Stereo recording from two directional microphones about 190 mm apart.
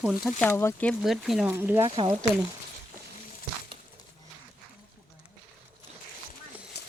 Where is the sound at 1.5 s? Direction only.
10° right (ahead or behind).